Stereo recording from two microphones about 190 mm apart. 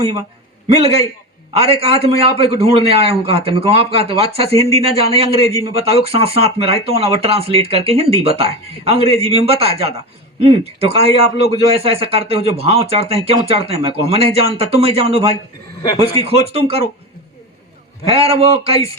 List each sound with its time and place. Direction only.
0.7 s speech: 30° right (ahead or behind)
18.0 s speech: 30° right (ahead or behind)